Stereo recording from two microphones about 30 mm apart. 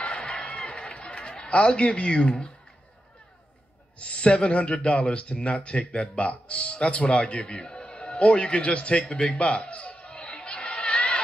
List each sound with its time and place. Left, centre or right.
0.0 s music: left
1.5 s speech: left
4.0 s speech: left